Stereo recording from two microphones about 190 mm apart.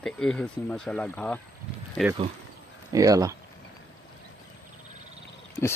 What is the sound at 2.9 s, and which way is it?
Speech, 20° right (ahead or behind).